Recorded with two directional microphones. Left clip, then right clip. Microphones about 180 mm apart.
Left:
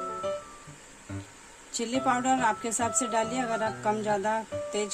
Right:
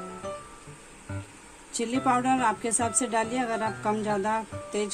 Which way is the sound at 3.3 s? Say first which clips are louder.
Right 1 dB; 5° left (ahead or behind).